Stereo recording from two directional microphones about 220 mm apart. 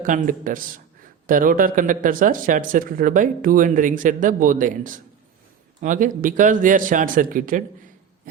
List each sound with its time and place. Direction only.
0.0 s speech: 35° right (ahead or behind)